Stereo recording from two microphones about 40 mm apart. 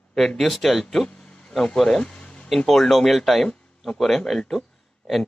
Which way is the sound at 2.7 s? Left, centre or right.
Centre.